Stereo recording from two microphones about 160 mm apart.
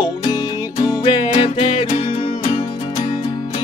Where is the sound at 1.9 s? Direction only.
45° left (ahead or behind).